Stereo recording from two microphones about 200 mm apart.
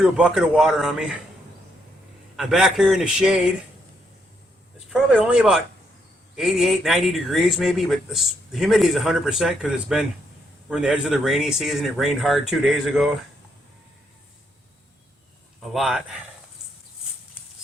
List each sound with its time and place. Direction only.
0.0 s speech: 5° right (ahead or behind)
2.3 s speech: centre (ahead or behind)
4.9 s speech: 5° right (ahead or behind)
15.6 s speech: centre (ahead or behind)